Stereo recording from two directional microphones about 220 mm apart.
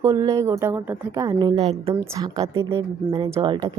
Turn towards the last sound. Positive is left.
turn(degrees=-20)  # may be behind; listen again after turning